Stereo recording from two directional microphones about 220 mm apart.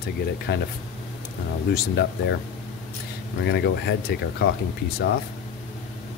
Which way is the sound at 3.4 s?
50° left (ahead or behind).